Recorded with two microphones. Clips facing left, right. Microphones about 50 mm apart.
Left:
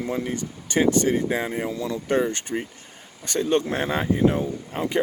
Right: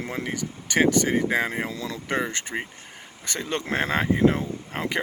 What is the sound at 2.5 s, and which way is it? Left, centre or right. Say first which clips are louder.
Speech: left 2 dB; right.